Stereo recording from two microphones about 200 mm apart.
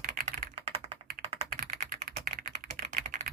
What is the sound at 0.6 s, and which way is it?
Computer keyboard, 30° right (ahead or behind).